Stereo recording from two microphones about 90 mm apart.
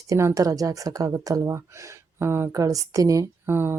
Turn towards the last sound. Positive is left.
turn(degrees=-25)  # may be behind; listen again after turning